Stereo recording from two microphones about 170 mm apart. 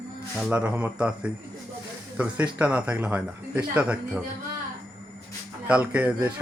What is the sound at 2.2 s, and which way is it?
Speech, 10° right (ahead or behind).